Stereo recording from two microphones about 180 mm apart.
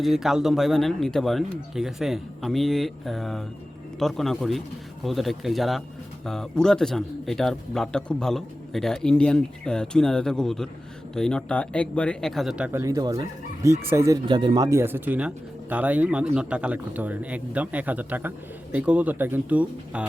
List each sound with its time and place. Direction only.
0.0 s speech: centre (ahead or behind)
12.8 s a man's voice: 20° right (ahead or behind)